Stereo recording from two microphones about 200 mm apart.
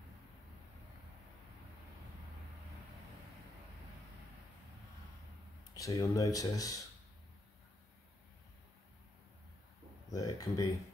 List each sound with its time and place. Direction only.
5.8 s speech: 15° left (ahead or behind)
10.1 s speech: 15° left (ahead or behind)